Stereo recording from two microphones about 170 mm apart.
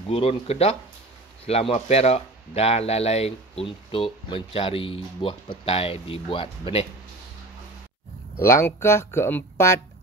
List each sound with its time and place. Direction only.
0.1 s speech: 35° left (ahead or behind)
8.4 s speech: 15° left (ahead or behind)